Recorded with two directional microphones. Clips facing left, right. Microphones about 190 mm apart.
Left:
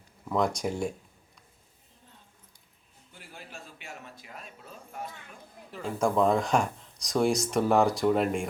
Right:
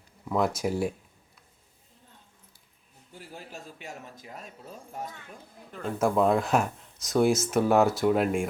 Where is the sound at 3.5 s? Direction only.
40° right (ahead or behind).